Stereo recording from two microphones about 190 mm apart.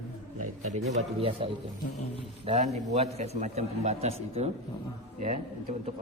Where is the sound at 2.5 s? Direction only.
35° right (ahead or behind).